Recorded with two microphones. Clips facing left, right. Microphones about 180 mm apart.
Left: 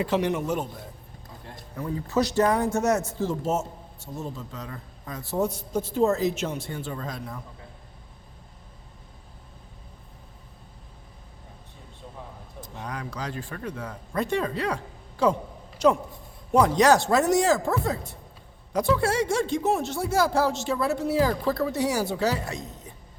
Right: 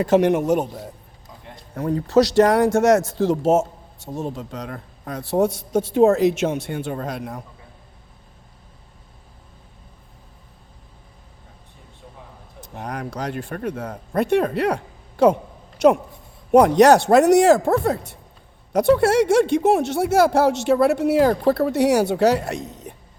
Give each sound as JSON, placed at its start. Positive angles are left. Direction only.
{"t": 0.0, "sound": "a man's voice", "side_deg": -50}
{"t": 1.8, "sound": "speech", "side_deg": -75}
{"t": 4.2, "sound": "speech", "side_deg": -75}
{"t": 12.7, "sound": "speech", "side_deg": -55}
{"t": 14.2, "sound": "a woman's voice", "side_deg": -65}
{"t": 16.5, "sound": "speech", "side_deg": -60}
{"t": 18.7, "sound": "speech", "side_deg": -65}